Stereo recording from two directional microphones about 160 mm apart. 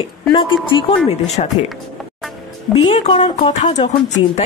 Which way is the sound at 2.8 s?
35° left (ahead or behind).